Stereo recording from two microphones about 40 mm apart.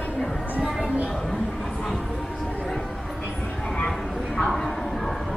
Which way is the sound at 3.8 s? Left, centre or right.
Centre.